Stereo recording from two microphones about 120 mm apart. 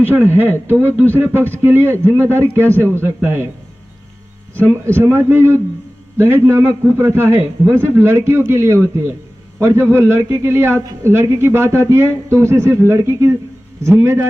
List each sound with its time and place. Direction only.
0.0 s a man's voice: 15° right (ahead or behind)
4.5 s speech: 20° right (ahead or behind)